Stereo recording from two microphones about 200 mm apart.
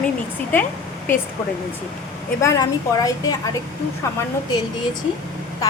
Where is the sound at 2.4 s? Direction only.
15° left (ahead or behind).